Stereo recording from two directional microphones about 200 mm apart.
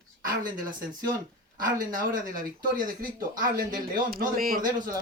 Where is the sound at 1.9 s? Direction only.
45° right (ahead or behind).